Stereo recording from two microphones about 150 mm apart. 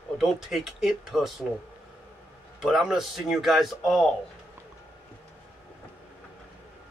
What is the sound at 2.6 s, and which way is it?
Speech, 5° right (ahead or behind).